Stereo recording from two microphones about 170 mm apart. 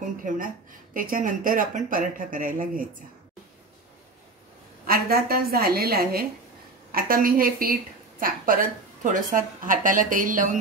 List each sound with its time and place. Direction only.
0.0 s speech: 50° right (ahead or behind)
4.8 s a woman's voice: 60° right (ahead or behind)